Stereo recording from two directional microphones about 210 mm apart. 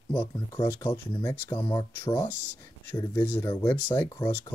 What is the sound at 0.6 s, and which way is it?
Speech, 20° left (ahead or behind).